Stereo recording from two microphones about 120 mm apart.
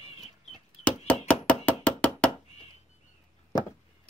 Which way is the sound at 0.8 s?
15° left (ahead or behind).